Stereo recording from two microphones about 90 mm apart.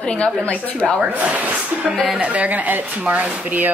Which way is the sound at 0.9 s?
15° right (ahead or behind).